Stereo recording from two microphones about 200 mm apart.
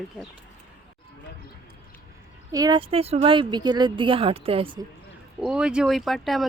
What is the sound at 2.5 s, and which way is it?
Speech, 20° right (ahead or behind).